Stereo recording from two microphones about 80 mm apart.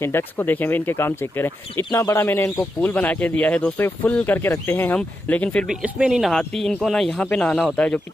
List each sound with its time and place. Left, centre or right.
0.0 s speech: left
2.8 s speech: left
4.9 s speech: centre
5.7 s speech: centre